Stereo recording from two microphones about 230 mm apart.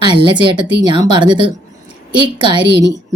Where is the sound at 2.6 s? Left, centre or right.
Right.